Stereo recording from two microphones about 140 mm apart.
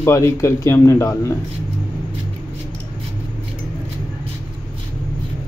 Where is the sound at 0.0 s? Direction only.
20° left (ahead or behind).